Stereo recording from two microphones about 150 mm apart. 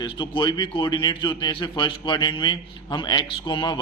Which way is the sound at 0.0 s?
30° left (ahead or behind).